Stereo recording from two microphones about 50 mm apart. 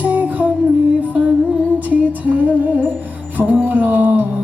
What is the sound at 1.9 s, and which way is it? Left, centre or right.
Music, right.